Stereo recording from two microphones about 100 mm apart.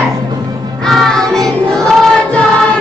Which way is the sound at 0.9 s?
5° left (ahead or behind).